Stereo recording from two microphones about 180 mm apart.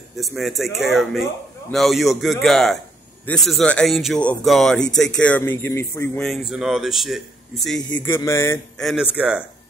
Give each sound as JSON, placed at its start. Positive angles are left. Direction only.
{"t": 0.2, "sound": "speech", "side_deg": 0}
{"t": 6.2, "sound": "speech", "side_deg": 0}
{"t": 7.9, "sound": "speech", "side_deg": 15}
{"t": 8.7, "sound": "speech", "side_deg": 0}